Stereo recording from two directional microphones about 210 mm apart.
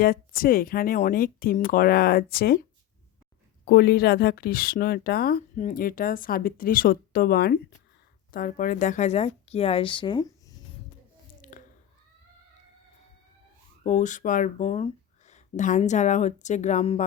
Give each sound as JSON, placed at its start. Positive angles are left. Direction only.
{"t": 0.0, "sound": "speech", "side_deg": 45}
{"t": 3.7, "sound": "speech", "side_deg": 50}
{"t": 11.5, "sound": "a sound", "side_deg": 40}
{"t": 13.8, "sound": "speech", "side_deg": 35}